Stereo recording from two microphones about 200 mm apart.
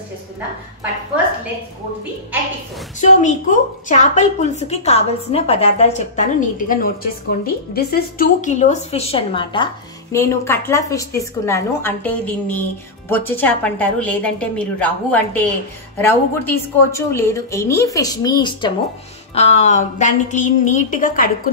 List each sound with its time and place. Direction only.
3.0 s a woman's voice: 35° left (ahead or behind)
6.7 s a woman's voice: 45° left (ahead or behind); by 9.7 s 25° left (ahead or behind)
10.1 s a woman's voice: 15° left (ahead or behind)
19.3 s a woman's voice: 30° left (ahead or behind)